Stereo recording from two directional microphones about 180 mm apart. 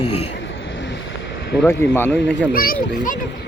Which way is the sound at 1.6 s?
15° left (ahead or behind).